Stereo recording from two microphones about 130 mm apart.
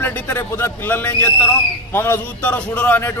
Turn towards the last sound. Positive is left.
turn(degrees=15)  # may be behind; listen again after turning